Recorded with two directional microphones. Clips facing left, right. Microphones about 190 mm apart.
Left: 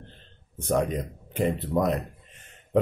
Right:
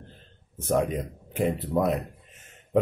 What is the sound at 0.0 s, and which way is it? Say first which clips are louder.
Speech: even; 5° right (ahead or behind).